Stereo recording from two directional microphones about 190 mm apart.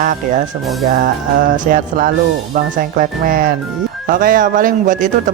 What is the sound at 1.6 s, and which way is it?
Speech, 50° right (ahead or behind).